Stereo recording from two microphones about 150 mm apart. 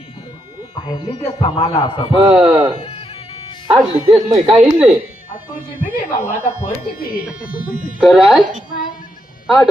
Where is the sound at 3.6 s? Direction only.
40° right (ahead or behind).